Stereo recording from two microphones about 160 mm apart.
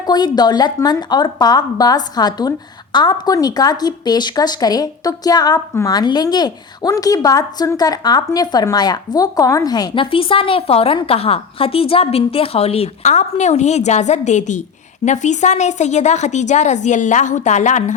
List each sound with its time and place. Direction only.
0.0 s a woman's voice: 25° left (ahead or behind); by 17.9 s 50° left (ahead or behind)